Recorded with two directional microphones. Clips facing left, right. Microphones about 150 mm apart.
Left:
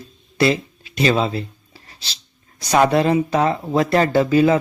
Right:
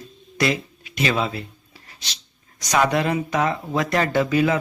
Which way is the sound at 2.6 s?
35° left (ahead or behind).